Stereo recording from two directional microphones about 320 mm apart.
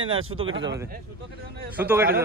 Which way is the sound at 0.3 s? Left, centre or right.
Right.